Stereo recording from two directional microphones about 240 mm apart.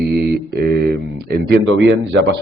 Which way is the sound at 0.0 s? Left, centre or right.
Right.